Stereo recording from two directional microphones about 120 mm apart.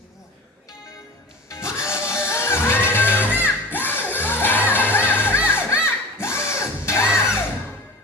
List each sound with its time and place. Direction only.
1.5 s music: 25° left (ahead or behind)